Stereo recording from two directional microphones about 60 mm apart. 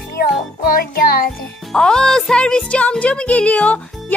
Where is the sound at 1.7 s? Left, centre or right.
Centre.